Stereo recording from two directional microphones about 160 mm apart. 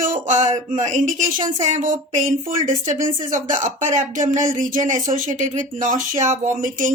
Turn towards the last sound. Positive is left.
turn(degrees=-55)  # may be behind; listen again after turning